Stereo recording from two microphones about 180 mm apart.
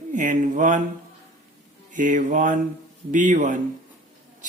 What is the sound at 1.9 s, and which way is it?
Speech, 45° right (ahead or behind).